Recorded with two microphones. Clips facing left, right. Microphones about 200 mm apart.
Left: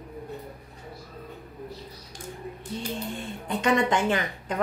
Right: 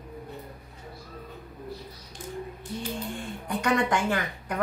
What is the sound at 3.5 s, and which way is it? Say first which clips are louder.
A woman's voice: left 2 dB; 20° left (ahead or behind).